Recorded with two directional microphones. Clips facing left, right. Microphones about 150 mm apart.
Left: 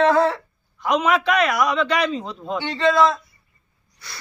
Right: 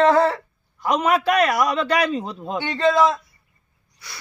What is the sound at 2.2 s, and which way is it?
Speech, 10° right (ahead or behind).